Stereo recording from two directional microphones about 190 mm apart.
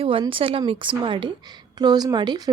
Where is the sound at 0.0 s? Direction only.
30° right (ahead or behind).